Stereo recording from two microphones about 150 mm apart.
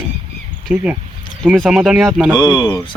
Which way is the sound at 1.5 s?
Centre (ahead or behind).